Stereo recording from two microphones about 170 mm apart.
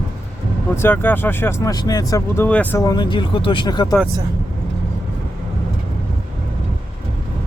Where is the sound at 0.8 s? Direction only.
10° left (ahead or behind).